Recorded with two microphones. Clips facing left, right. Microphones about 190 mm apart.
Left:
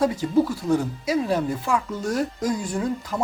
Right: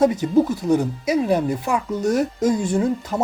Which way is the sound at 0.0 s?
20° right (ahead or behind).